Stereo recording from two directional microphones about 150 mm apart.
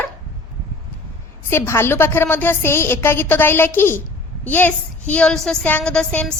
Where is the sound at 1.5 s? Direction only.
15° left (ahead or behind).